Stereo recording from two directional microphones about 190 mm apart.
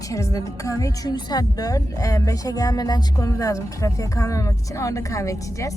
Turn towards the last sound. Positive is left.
turn(degrees=15)  # may be behind; listen again after turning